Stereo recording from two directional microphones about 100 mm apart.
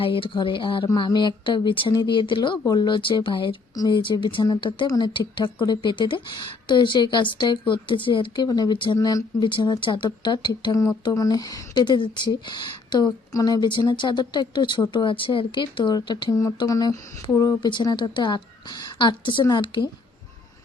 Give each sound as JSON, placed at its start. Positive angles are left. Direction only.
{"t": 0.0, "sound": "speech", "side_deg": 60}
{"t": 8.4, "sound": "speech", "side_deg": 40}
{"t": 9.0, "sound": "speech", "side_deg": 35}
{"t": 9.4, "sound": "speech", "side_deg": 50}
{"t": 16.6, "sound": "speech", "side_deg": 35}
{"t": 17.6, "sound": "speech", "side_deg": 50}